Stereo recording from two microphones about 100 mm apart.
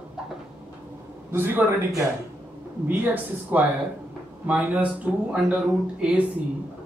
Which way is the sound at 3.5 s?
20° right (ahead or behind).